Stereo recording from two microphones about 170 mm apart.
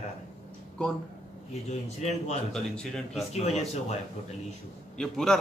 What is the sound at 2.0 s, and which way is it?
Speech, 40° left (ahead or behind).